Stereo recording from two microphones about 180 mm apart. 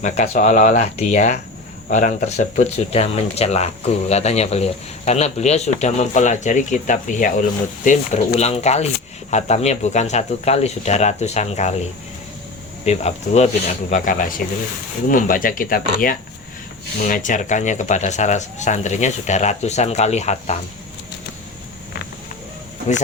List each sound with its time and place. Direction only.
0.0 s speech: 40° left (ahead or behind)
12.8 s speech: 35° left (ahead or behind)
13.9 s speech: 50° left (ahead or behind)